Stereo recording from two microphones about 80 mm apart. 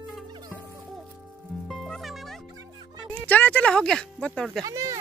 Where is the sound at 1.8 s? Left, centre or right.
Centre.